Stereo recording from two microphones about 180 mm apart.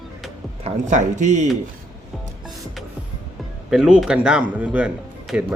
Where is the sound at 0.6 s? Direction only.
40° right (ahead or behind).